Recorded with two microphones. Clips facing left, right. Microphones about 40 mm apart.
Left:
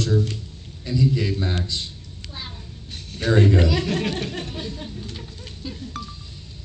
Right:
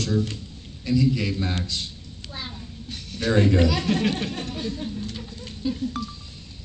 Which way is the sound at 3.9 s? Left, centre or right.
Right.